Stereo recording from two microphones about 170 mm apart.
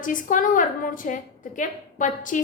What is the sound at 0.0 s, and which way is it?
A woman's voice, 50° left (ahead or behind).